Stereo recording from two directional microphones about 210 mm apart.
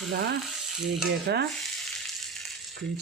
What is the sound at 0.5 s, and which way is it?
Sizzle, centre (ahead or behind).